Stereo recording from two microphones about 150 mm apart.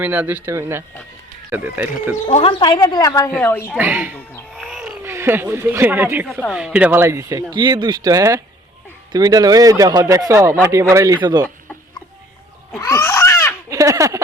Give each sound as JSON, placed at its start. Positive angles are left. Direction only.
{"t": 0.0, "sound": "speech", "side_deg": -10}
{"t": 2.2, "sound": "a woman's voice", "side_deg": 40}
{"t": 3.8, "sound": "speech", "side_deg": -10}
{"t": 4.5, "sound": "wild animals", "side_deg": 0}
{"t": 5.0, "sound": "speech", "side_deg": -15}
{"t": 13.0, "sound": "a sound", "side_deg": 15}
{"t": 13.7, "sound": "a sound", "side_deg": -20}